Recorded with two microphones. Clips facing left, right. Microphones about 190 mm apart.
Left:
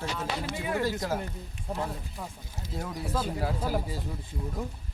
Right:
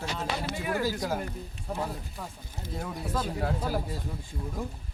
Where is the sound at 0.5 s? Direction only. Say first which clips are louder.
Left 1 dB; 20° left (ahead or behind).